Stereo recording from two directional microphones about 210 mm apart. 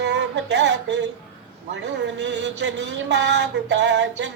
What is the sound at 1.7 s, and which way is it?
Speech, 55° right (ahead or behind).